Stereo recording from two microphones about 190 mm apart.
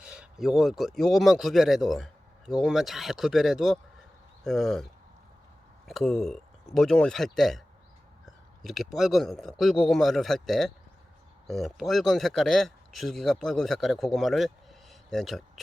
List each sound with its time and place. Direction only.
0.0 s speech: 5° right (ahead or behind)
5.9 s speech: centre (ahead or behind)
8.6 s speech: centre (ahead or behind)